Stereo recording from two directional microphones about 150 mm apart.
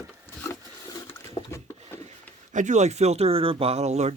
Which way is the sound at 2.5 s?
55° right (ahead or behind).